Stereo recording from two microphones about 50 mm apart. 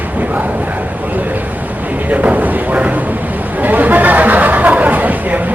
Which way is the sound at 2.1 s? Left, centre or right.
Right.